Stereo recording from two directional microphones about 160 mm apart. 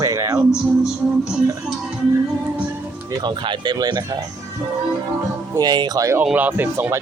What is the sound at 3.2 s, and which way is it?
Speech, 30° right (ahead or behind).